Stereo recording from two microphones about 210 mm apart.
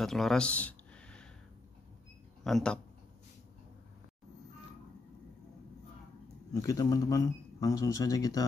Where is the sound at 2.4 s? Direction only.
5° left (ahead or behind).